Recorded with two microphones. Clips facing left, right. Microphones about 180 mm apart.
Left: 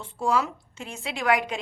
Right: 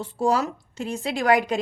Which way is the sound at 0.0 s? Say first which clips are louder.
Right 3 dB; 40° right (ahead or behind).